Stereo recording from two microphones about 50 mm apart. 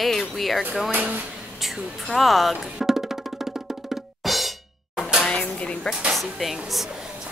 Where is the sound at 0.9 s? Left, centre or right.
Right.